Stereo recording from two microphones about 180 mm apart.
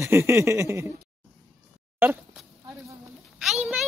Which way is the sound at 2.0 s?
10° right (ahead or behind).